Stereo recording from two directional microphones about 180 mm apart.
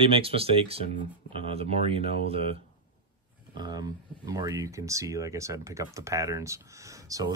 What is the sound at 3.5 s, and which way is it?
Speech, 25° right (ahead or behind).